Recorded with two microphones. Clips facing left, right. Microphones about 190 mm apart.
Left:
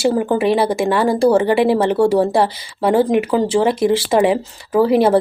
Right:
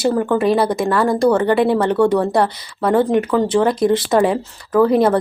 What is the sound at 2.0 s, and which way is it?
Speech, 30° left (ahead or behind).